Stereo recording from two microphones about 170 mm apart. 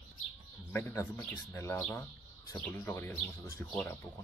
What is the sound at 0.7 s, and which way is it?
Speech, 15° left (ahead or behind).